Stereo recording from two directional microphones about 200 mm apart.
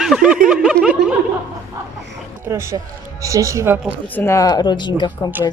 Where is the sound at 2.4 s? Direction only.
15° right (ahead or behind).